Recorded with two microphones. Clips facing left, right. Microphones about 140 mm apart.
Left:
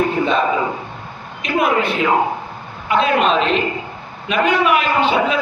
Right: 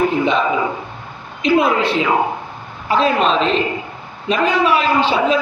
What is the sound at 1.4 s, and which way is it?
A woman's voice, 30° right (ahead or behind).